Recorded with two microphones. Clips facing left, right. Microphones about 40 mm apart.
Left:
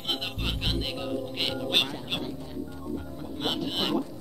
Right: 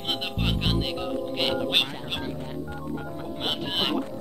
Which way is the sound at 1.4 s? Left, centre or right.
Right.